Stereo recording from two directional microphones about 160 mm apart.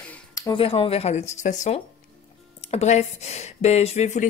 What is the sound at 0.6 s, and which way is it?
Speech, 35° left (ahead or behind).